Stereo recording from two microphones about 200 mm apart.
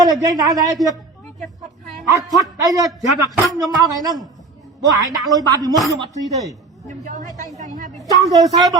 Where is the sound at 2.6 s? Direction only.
15° right (ahead or behind).